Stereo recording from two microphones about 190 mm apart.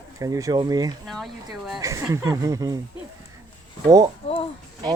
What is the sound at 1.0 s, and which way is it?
Speech, centre (ahead or behind).